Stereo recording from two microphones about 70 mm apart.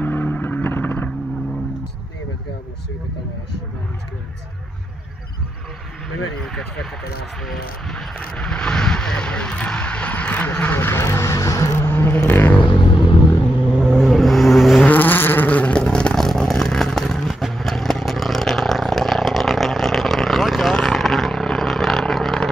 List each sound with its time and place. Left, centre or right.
0.0 s vehicle: left
6.4 s speech: centre
7.4 s a sound: centre
8.4 s speech: centre
10.8 s speech: left
11.9 s vehicle: left
13.7 s vehicle: centre
14.8 s vehicle: left; by 22.5 s centre